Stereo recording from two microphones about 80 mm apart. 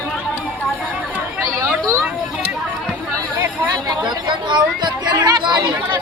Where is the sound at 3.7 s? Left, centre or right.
Right.